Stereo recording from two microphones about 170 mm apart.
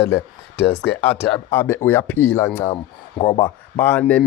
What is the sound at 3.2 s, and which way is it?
Speech, 25° left (ahead or behind).